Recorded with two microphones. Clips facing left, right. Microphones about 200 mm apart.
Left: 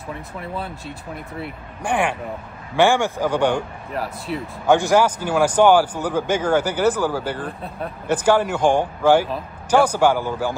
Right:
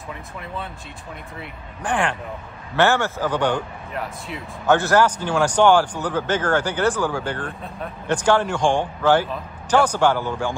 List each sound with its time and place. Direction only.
1.8 s a man's voice: 10° left (ahead or behind)
3.9 s speech: 35° left (ahead or behind)
4.6 s a man's voice: 10° left (ahead or behind)